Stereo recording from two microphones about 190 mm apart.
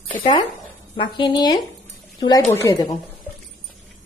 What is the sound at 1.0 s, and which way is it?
Speech, 25° left (ahead or behind).